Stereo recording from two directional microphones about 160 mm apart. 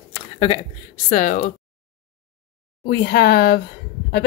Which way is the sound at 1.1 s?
55° left (ahead or behind).